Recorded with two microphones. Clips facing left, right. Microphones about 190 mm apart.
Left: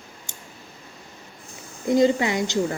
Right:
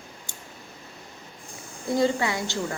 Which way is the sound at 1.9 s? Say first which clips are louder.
Left 5 dB; 20° left (ahead or behind).